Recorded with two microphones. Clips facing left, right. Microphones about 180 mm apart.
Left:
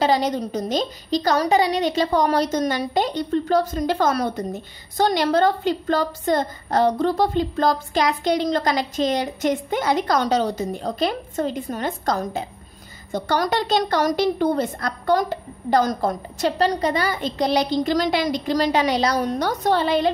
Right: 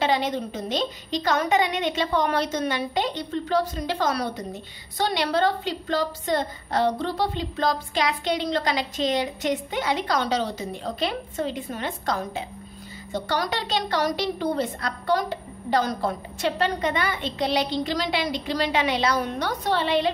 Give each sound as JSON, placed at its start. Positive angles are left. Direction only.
{"t": 0.0, "sound": "a woman's voice", "side_deg": 40}